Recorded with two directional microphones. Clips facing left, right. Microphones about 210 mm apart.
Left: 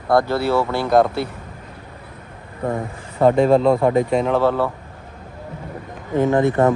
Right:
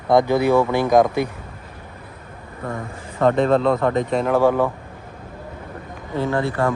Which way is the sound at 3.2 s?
5° left (ahead or behind).